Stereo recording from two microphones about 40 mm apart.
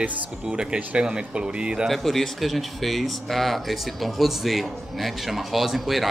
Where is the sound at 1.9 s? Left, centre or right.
Centre.